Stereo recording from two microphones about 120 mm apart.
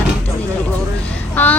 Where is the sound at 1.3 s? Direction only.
15° left (ahead or behind).